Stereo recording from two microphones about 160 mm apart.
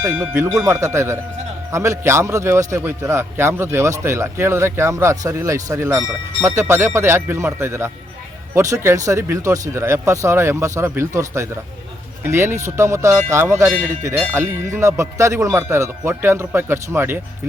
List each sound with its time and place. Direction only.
0.1 s a man's voice: 10° right (ahead or behind)